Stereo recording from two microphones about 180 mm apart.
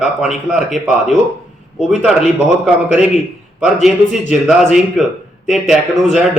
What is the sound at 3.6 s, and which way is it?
Speech, centre (ahead or behind).